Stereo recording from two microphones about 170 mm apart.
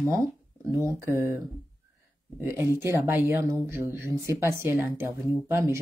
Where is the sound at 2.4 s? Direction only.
15° right (ahead or behind).